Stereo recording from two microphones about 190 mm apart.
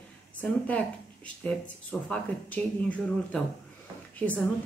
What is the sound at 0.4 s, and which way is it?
Speech, 5° left (ahead or behind).